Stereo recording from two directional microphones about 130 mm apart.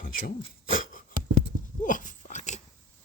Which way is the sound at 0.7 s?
90° left.